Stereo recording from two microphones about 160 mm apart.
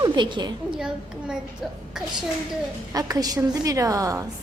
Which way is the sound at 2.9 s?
25° right (ahead or behind).